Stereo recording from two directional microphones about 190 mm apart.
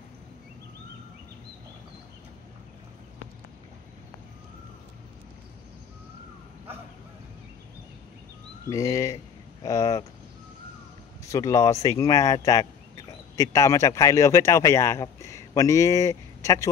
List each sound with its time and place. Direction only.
8.6 s speech: 15° left (ahead or behind)
11.2 s speech: 15° left (ahead or behind)